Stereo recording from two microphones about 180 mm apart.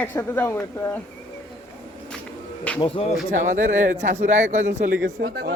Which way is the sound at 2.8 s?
30° left (ahead or behind).